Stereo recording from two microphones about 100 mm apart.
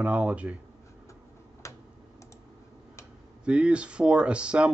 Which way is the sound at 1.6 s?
30° left (ahead or behind).